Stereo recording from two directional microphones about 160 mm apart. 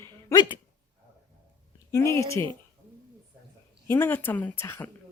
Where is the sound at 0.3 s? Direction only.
30° left (ahead or behind).